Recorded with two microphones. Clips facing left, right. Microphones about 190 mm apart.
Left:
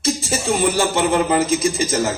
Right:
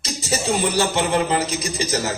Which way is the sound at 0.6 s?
50° left (ahead or behind).